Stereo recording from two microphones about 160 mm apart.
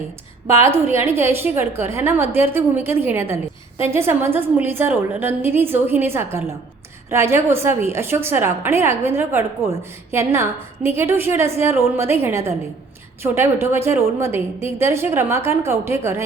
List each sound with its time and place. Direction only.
0.9 s a woman's voice: 15° right (ahead or behind)